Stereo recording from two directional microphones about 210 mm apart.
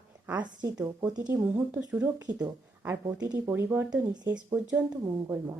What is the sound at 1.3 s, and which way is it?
Speech, 10° right (ahead or behind).